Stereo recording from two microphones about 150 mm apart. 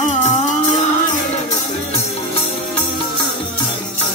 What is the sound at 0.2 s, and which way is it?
Music, 50° left (ahead or behind).